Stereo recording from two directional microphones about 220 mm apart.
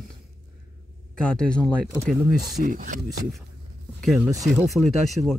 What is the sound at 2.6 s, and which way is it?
Speech, 35° right (ahead or behind).